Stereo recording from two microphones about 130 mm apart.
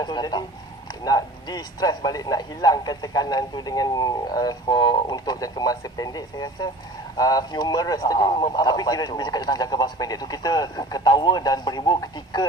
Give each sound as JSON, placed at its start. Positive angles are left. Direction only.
{"t": 0.0, "sound": "speech", "side_deg": 30}
{"t": 8.3, "sound": "speech", "side_deg": 40}